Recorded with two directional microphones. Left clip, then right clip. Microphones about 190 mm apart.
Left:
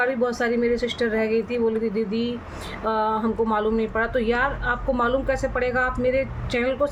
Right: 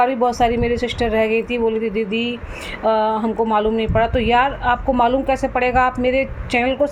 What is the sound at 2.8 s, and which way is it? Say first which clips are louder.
Speech: right 6 dB; 10° right (ahead or behind).